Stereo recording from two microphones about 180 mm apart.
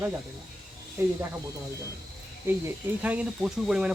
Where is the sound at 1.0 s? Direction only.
15° right (ahead or behind).